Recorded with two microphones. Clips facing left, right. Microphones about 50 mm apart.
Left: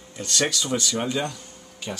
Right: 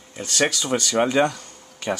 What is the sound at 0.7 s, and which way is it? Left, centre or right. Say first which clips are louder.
Speech: right 6 dB; right.